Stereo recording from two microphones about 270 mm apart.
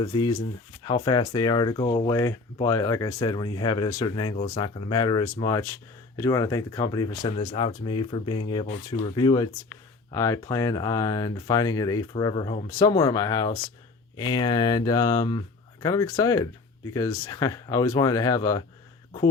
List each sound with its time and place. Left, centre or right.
0.0 s speech: centre